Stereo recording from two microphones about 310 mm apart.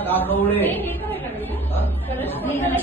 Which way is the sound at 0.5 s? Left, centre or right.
Centre.